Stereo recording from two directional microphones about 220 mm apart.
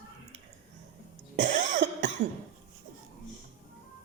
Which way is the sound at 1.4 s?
35° right (ahead or behind).